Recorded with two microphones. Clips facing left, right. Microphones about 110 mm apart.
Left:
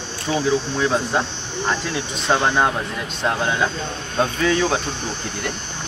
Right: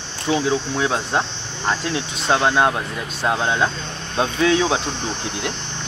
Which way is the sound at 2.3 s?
15° right (ahead or behind).